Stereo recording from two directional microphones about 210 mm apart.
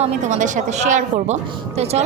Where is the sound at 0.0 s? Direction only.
35° right (ahead or behind).